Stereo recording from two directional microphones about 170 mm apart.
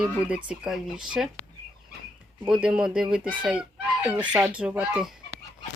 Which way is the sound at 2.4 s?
5° right (ahead or behind).